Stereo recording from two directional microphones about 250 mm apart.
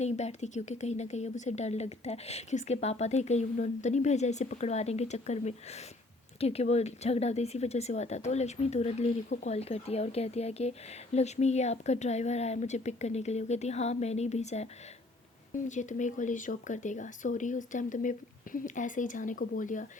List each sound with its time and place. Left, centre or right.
0.0 s speech: left
15.7 s speech: left